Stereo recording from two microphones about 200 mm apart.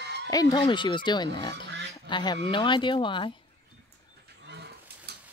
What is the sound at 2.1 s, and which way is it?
Speech, 25° left (ahead or behind).